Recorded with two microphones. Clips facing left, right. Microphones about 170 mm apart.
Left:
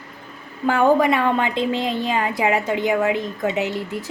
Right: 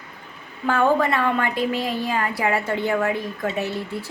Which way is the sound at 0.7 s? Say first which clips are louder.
Left 3 dB; 15° left (ahead or behind).